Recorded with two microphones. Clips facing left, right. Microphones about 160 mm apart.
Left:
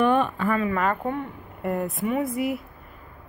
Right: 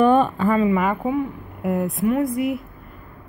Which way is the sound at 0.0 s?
35° right (ahead or behind).